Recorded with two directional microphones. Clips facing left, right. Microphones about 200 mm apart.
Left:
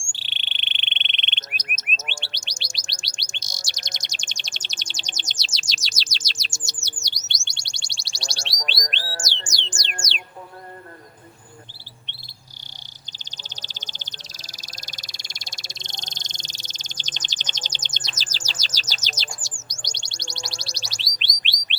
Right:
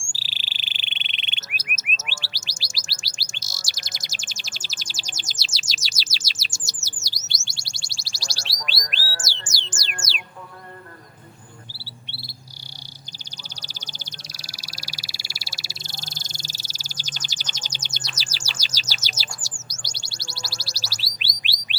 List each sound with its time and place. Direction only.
0.1 s frog: 5° right (ahead or behind)
2.3 s bird: 5° right (ahead or behind)
5.7 s chirp: 5° right (ahead or behind)
8.5 s bird: 20° left (ahead or behind)
8.9 s squawk: 25° left (ahead or behind)
10.1 s music: 5° right (ahead or behind)
12.0 s cricket: 10° right (ahead or behind)
13.6 s frog: 10° right (ahead or behind)
19.6 s bird: 5° right (ahead or behind)